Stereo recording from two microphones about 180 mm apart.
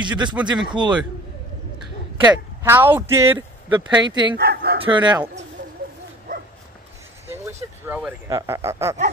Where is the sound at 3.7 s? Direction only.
25° right (ahead or behind).